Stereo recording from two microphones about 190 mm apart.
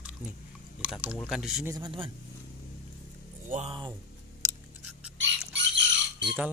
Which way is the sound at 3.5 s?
30° right (ahead or behind).